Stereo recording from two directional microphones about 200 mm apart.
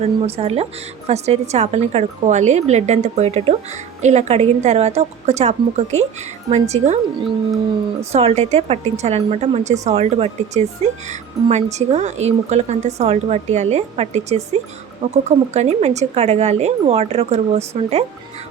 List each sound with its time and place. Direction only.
0.0 s a woman's voice: 30° right (ahead or behind)